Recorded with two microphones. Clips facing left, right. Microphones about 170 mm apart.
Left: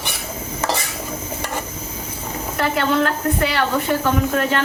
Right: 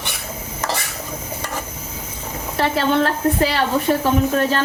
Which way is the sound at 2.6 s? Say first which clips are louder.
Right 1 dB; 30° right (ahead or behind).